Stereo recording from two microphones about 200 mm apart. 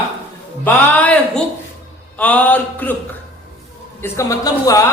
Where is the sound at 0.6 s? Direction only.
5° left (ahead or behind).